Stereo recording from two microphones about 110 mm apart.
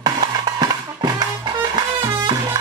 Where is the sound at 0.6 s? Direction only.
40° right (ahead or behind).